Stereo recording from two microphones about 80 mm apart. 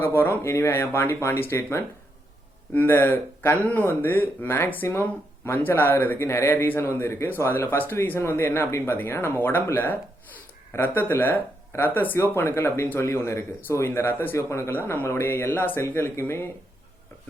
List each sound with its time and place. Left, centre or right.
0.0 s speech: left